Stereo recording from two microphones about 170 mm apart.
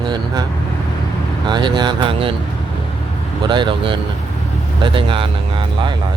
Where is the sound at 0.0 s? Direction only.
25° right (ahead or behind).